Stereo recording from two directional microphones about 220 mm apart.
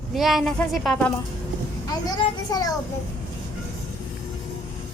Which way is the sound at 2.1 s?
15° left (ahead or behind).